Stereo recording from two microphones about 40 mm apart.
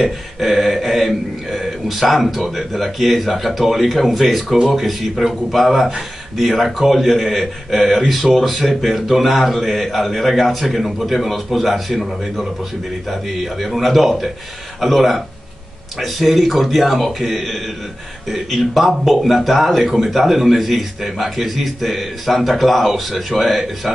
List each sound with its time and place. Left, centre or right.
0.0 s speech: centre